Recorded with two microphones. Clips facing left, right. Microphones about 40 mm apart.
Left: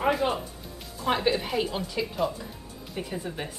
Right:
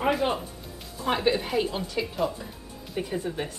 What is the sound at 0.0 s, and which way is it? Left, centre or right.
A woman's voice, centre.